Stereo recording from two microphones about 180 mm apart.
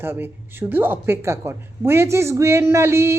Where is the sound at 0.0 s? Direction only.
10° right (ahead or behind).